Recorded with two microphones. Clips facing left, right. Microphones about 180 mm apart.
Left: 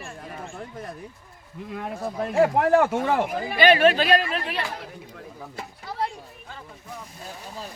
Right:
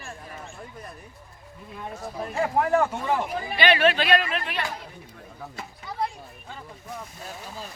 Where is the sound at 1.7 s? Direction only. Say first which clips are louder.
Left 5 dB; 80° left.